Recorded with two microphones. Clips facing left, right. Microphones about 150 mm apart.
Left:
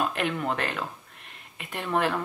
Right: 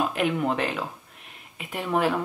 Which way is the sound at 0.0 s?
5° right (ahead or behind).